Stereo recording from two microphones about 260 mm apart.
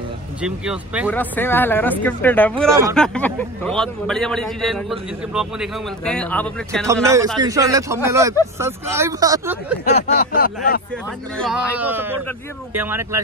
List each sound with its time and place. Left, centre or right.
0.4 s a man's voice: centre
1.1 s a man's voice: centre
6.9 s speech: centre
9.9 s a sound: left
11.3 s a man's voice: centre